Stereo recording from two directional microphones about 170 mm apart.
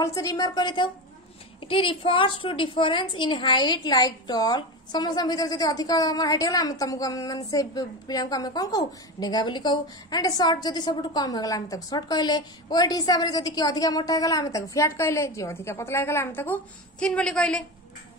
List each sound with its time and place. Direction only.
0.0 s a woman's voice: 20° left (ahead or behind); by 17.6 s 5° left (ahead or behind)